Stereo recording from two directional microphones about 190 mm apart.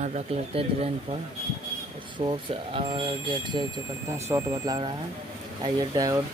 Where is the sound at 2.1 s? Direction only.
25° right (ahead or behind).